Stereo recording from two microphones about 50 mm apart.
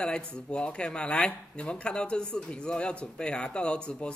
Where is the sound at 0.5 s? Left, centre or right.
Left.